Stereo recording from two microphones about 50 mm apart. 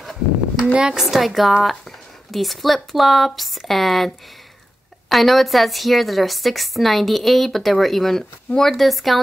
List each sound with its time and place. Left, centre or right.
0.0 s a sound: centre
0.9 s a woman's voice: centre
5.1 s a woman's voice: centre